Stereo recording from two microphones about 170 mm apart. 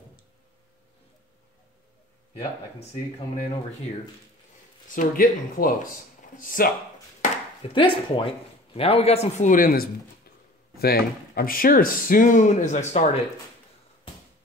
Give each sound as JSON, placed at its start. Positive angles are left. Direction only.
{"t": 4.8, "sound": "speech", "side_deg": 55}
{"t": 7.7, "sound": "speech", "side_deg": 30}